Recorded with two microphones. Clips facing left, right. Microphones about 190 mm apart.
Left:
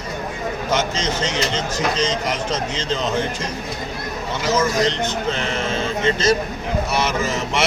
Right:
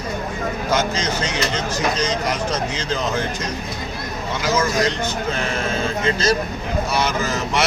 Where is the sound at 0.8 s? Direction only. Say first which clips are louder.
Even; 25° left (ahead or behind).